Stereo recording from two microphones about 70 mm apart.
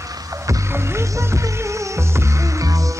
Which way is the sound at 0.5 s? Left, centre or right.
Right.